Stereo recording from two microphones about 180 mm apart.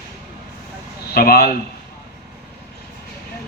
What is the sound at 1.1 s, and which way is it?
Speech, 55° left (ahead or behind).